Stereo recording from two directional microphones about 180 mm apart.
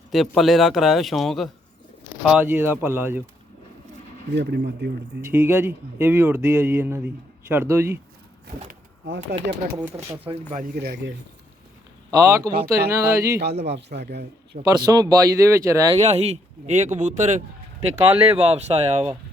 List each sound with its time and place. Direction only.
0.1 s speech: centre (ahead or behind)
4.4 s a man's voice: 70° right (ahead or behind)
5.2 s speech: 15° right (ahead or behind)
9.0 s speech: 90° right
10.2 s speech: 45° right (ahead or behind); by 11.1 s 60° right (ahead or behind)
12.1 s speech: 20° right (ahead or behind)
13.5 s speech: 35° right (ahead or behind)
13.7 s a man's voice: 70° right (ahead or behind)
14.6 s speech: 20° right (ahead or behind)
16.0 s speech: 35° right (ahead or behind)
17.9 s speech: 15° right (ahead or behind)
18.3 s speech: 35° right (ahead or behind)